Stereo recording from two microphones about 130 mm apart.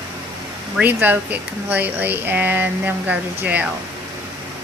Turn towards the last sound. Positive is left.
turn(degrees=-10)  # may be behind; listen again after turning